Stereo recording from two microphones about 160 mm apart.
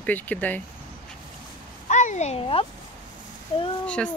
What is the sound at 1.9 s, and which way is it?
Speech, 50° left (ahead or behind).